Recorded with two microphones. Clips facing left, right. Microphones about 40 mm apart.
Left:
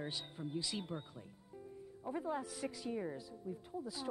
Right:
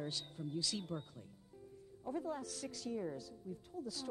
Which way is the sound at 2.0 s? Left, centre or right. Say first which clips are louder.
Left 1 dB; left.